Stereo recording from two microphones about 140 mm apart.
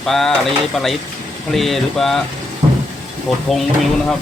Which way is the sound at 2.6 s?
25° right (ahead or behind).